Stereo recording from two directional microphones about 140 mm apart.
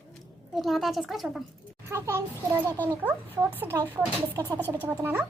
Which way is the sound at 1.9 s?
20° right (ahead or behind).